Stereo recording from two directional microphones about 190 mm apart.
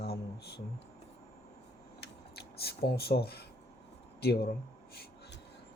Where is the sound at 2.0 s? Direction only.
60° left (ahead or behind).